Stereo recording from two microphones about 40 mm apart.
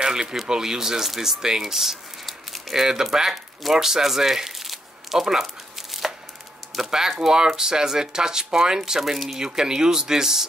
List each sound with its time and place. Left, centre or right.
0.0 s a sound: centre
0.5 s speech: centre
9.4 s speech: centre